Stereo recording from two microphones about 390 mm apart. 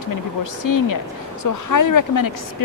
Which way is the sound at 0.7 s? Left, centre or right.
Left.